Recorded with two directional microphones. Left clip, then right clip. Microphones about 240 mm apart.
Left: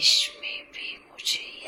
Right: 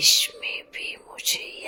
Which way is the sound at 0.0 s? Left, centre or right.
Right.